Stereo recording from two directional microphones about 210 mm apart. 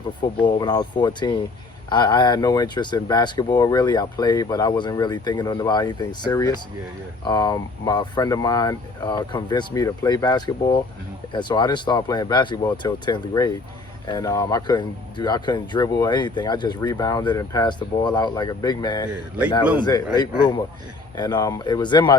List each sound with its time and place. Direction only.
0.2 s speech: 20° left (ahead or behind)
21.2 s speech: 20° left (ahead or behind)